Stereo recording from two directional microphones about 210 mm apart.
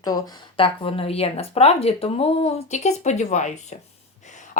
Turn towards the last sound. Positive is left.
turn(degrees=35)  # may be behind; listen again after turning